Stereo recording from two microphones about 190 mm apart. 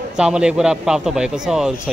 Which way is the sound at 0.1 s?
5° right (ahead or behind).